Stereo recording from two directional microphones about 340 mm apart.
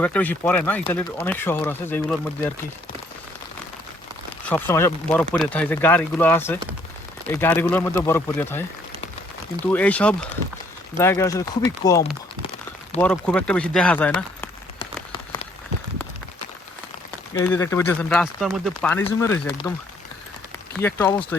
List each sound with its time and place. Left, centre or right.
0.0 s speech: centre
4.4 s speech: centre
13.0 s a sound: centre
17.4 s speech: centre
20.8 s speech: centre